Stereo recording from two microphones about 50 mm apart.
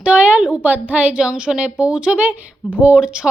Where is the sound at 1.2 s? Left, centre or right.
Right.